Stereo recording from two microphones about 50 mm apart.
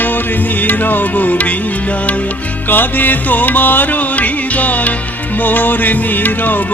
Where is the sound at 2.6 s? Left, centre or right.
Left.